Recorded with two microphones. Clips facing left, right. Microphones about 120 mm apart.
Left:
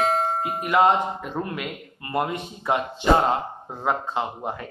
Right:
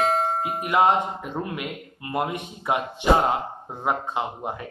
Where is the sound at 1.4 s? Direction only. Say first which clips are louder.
Even; 15° right (ahead or behind).